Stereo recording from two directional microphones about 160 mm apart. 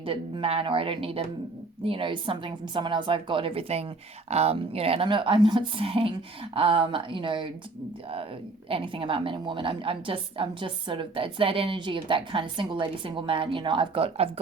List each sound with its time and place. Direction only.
0.0 s a woman's voice: 35° right (ahead or behind)
8.7 s a woman's voice: 35° right (ahead or behind)